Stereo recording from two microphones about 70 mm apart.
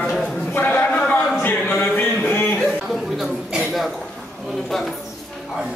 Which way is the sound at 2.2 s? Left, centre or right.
Left.